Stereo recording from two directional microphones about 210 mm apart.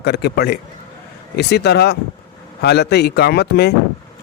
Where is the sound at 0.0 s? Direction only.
50° left (ahead or behind).